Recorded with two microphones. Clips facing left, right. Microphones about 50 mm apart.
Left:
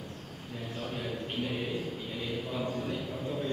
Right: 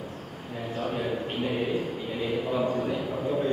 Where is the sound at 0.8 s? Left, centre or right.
Centre.